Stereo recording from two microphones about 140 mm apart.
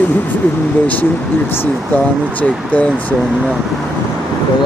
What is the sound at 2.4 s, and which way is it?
Speech, 10° left (ahead or behind).